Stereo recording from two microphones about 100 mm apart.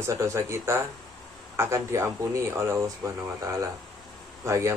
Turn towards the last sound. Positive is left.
turn(degrees=-30)  # may be behind; listen again after turning